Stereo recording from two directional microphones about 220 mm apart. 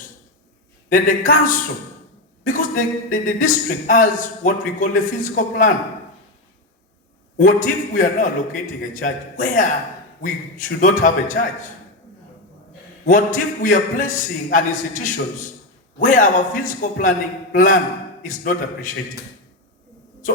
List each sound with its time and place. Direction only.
0.9 s speech: 40° left (ahead or behind)
7.3 s speech: 35° left (ahead or behind)
13.1 s speech: 35° left (ahead or behind)